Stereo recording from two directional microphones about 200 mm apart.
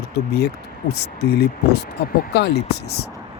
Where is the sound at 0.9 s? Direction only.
55° left (ahead or behind).